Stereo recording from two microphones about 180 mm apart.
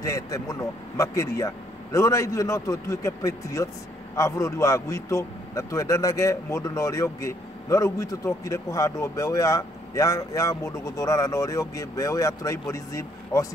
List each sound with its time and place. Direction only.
0.0 s a man's voice: 20° left (ahead or behind)